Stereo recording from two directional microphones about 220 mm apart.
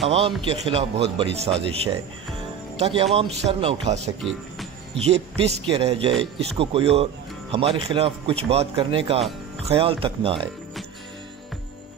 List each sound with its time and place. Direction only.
0.5 s speech: 25° right (ahead or behind)
4.2 s music: centre (ahead or behind)
5.0 s speech: 30° right (ahead or behind)